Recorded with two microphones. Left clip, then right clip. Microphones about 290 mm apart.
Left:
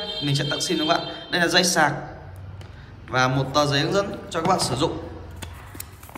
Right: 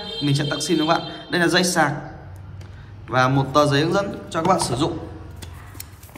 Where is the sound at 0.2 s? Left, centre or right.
Centre.